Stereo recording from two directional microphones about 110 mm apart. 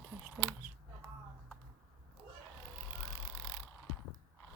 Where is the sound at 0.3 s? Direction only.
10° right (ahead or behind).